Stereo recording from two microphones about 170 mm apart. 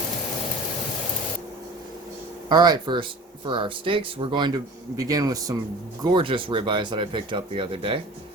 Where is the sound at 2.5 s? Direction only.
25° right (ahead or behind).